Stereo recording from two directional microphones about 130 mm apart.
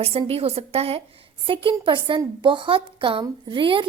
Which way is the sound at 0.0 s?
50° right (ahead or behind).